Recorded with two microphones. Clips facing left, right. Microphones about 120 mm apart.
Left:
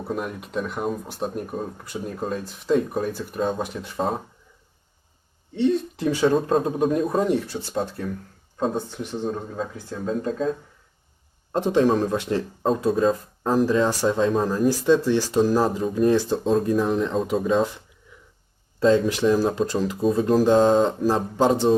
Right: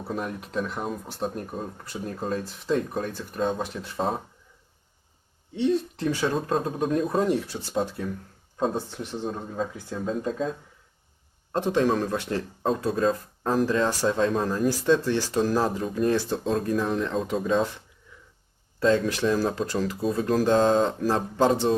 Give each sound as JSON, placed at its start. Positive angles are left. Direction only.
{"t": 0.1, "sound": "speech", "side_deg": 5}
{"t": 5.5, "sound": "speech", "side_deg": 0}
{"t": 11.5, "sound": "speech", "side_deg": 15}
{"t": 20.7, "sound": "speech", "side_deg": 5}
{"t": 21.3, "sound": "speech", "side_deg": 15}